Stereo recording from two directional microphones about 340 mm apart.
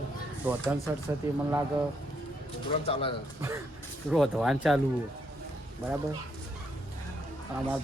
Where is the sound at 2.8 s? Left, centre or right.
Centre.